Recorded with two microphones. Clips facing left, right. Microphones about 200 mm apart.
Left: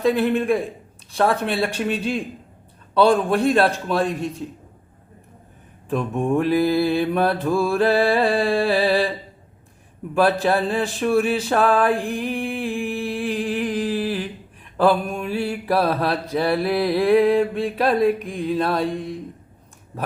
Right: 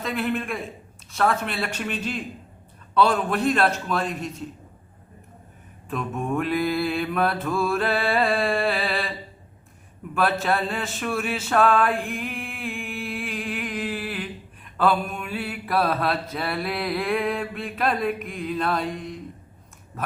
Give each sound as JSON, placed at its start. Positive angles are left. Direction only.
{"t": 0.1, "sound": "mantra", "side_deg": 30}
{"t": 5.9, "sound": "mantra", "side_deg": 30}
{"t": 10.2, "sound": "a sound", "side_deg": 35}
{"t": 14.8, "sound": "mantra", "side_deg": 30}